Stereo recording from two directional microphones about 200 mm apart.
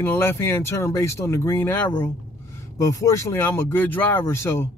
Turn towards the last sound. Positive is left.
turn(degrees=15)  # may be behind; listen again after turning